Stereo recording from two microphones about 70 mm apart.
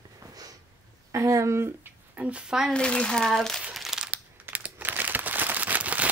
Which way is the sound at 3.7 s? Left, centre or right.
Centre.